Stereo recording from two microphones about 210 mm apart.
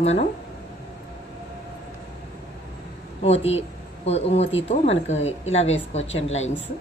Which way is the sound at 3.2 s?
30° left (ahead or behind).